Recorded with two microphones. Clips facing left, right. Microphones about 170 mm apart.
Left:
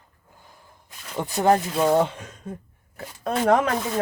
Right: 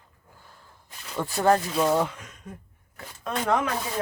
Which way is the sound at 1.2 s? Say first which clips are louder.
Left 2 dB; 20° left (ahead or behind).